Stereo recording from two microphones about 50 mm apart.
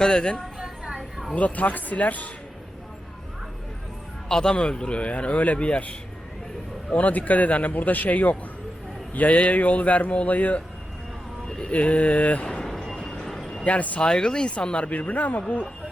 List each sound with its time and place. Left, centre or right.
0.0 s speech: centre
1.3 s speech: left
4.3 s speech: centre
12.5 s a sound: centre
13.7 s speech: left
14.1 s speech: centre; by 15.6 s left